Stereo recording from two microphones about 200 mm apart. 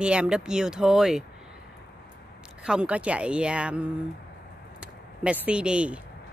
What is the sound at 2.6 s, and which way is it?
Speech, 5° right (ahead or behind).